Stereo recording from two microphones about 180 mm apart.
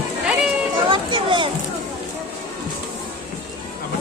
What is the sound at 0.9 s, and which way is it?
Speech, 25° right (ahead or behind).